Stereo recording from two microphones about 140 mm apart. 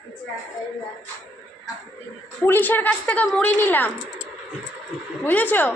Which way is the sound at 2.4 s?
15° left (ahead or behind).